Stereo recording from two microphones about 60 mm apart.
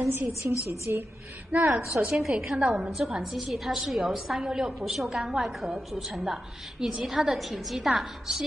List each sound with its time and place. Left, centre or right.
0.0 s a woman's voice: right
1.5 s a woman's voice: right
2.1 s a woman's voice: centre